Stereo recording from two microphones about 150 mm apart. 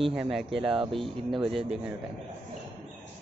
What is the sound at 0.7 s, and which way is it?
Speech, 35° right (ahead or behind).